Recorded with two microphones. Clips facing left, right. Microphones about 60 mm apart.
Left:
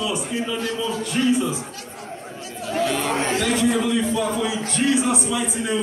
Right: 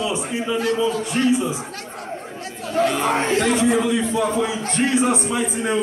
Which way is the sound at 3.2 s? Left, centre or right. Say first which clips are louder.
Right 2 dB; right.